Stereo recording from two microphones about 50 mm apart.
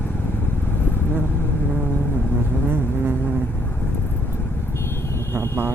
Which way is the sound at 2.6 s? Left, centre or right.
Right.